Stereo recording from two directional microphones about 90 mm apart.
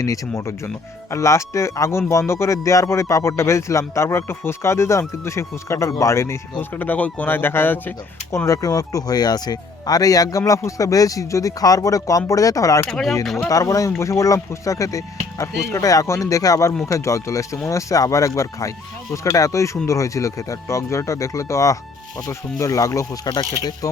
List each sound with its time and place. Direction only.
0.0 s speech: 35° left (ahead or behind)
6.6 s speech: 20° left (ahead or behind)
8.4 s speech: 40° left (ahead or behind)
12.9 s speech: 5° left (ahead or behind)
13.5 s speech: 40° left (ahead or behind)
23.2 s speech: 55° left (ahead or behind)
23.8 s speech: 40° left (ahead or behind)